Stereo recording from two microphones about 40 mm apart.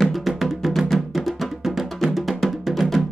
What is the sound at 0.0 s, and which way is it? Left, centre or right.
Music, centre.